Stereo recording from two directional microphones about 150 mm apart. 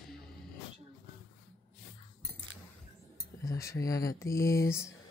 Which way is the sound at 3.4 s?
20° left (ahead or behind).